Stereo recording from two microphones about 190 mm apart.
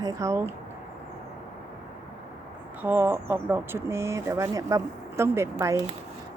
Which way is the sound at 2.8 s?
10° right (ahead or behind).